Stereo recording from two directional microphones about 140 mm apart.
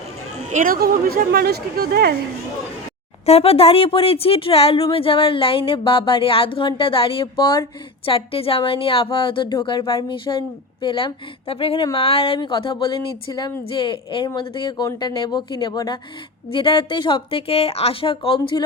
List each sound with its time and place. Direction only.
0.5 s speech: 85° right
3.2 s speech: 45° left (ahead or behind)